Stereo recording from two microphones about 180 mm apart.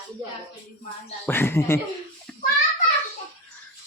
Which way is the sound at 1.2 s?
10° left (ahead or behind).